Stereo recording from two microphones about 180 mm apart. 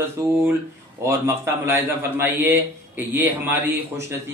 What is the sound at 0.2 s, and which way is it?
A man's voice, 15° right (ahead or behind).